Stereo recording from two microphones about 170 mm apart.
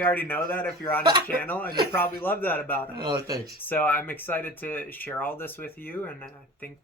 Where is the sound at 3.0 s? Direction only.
25° right (ahead or behind).